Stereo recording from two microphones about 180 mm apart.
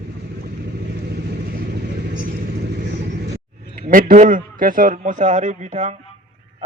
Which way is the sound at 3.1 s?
60° right (ahead or behind).